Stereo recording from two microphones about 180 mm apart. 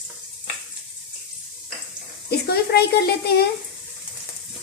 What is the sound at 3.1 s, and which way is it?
Speech, 60° left (ahead or behind).